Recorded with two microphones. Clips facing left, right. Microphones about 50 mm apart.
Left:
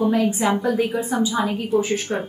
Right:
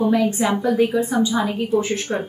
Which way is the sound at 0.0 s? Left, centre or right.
Centre.